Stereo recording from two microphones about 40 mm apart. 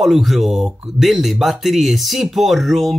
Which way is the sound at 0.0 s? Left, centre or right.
Centre.